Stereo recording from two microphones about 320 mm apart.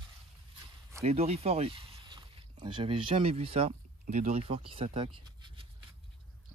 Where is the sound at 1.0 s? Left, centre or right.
Centre.